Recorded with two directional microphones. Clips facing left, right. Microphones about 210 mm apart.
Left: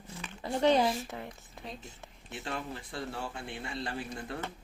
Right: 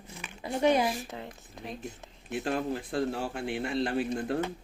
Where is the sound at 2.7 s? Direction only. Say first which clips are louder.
Right 9 dB; 70° right (ahead or behind).